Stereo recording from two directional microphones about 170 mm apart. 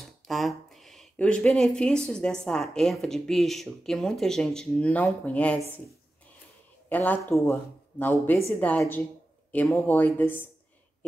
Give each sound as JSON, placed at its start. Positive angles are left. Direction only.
{"t": 0.0, "sound": "a sound", "side_deg": 0}
{"t": 2.4, "sound": "speech", "side_deg": 5}
{"t": 6.9, "sound": "speech", "side_deg": 10}